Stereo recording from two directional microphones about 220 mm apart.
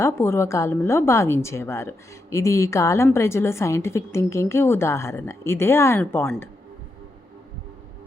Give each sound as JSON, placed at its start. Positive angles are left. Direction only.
{"t": 0.0, "sound": "a woman's voice", "side_deg": 10}